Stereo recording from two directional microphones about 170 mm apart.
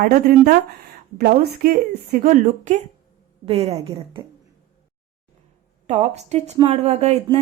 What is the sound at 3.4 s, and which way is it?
Speech, 35° right (ahead or behind).